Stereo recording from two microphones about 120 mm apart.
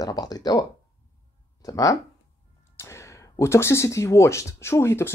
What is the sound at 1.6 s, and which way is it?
Speech, 30° left (ahead or behind).